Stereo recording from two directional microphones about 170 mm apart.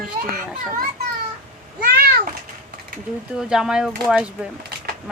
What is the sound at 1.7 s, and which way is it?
Cat, 65° right (ahead or behind).